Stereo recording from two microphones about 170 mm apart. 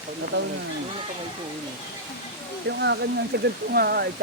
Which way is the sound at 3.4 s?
65° right (ahead or behind).